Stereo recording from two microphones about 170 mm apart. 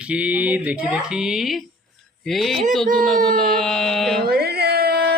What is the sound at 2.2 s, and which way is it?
Speech, centre (ahead or behind).